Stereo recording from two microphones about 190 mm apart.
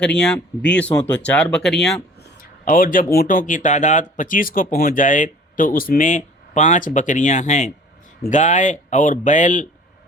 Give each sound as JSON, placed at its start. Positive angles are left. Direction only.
{"t": 0.0, "sound": "speech", "side_deg": 5}
{"t": 2.4, "sound": "speech", "side_deg": 50}